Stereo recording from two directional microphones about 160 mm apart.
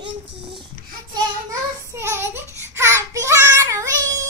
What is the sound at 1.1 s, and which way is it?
Child singing, 20° right (ahead or behind).